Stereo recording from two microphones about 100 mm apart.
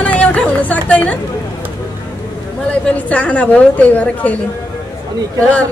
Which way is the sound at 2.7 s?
15° left (ahead or behind).